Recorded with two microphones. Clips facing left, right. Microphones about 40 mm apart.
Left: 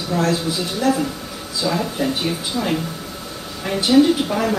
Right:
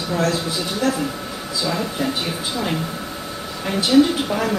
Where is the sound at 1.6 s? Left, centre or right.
Centre.